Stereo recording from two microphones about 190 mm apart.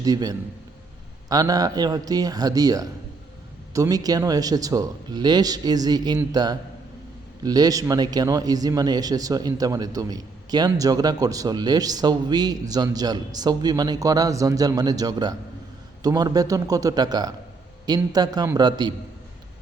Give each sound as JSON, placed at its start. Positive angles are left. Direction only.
{"t": 0.0, "sound": "speech", "side_deg": -20}